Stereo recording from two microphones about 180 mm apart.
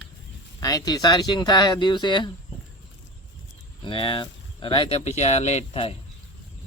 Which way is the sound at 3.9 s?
30° left (ahead or behind).